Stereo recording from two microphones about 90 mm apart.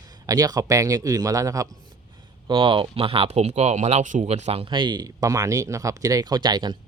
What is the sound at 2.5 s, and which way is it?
Speech, 75° right (ahead or behind).